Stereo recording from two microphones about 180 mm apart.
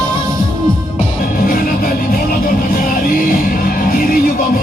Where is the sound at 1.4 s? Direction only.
55° left (ahead or behind).